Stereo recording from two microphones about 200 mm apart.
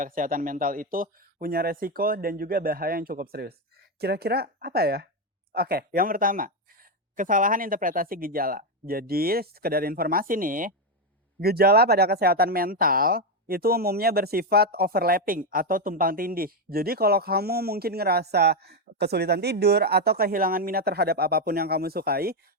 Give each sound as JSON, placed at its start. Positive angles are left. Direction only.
{"t": 0.0, "sound": "speech", "side_deg": -45}